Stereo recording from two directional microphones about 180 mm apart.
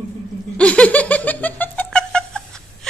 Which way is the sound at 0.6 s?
5° left (ahead or behind).